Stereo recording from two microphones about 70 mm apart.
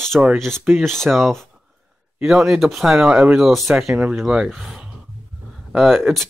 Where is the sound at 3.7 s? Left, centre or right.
Centre.